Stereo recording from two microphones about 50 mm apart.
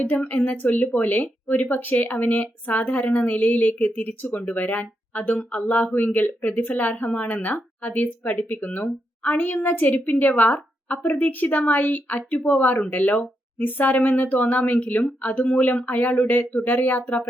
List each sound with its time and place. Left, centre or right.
0.2 s speech: left